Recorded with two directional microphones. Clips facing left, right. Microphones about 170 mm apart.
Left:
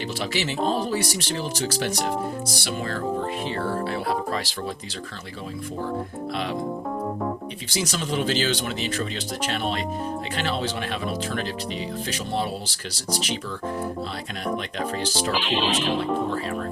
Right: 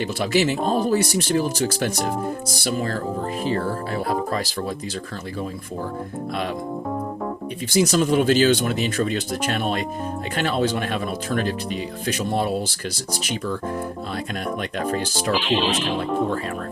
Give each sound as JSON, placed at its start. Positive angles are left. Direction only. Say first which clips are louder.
{"t": 0.2, "sound": "speech", "louder": "right 6 dB", "side_deg": -50}
{"t": 2.6, "sound": "music", "louder": "right 6 dB", "side_deg": -40}
{"t": 3.5, "sound": "speech", "louder": "right 2 dB", "side_deg": -45}
{"t": 7.7, "sound": "speech", "louder": "right 9 dB", "side_deg": -45}
{"t": 14.8, "sound": "speech", "louder": "right 3 dB", "side_deg": -50}
{"t": 15.3, "sound": "music", "louder": "right 5 dB", "side_deg": 0}